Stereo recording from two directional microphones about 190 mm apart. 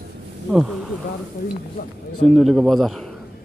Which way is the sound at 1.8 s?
55° left (ahead or behind).